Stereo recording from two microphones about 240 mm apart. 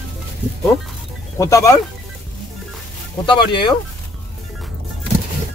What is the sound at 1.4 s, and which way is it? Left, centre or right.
Speech, centre.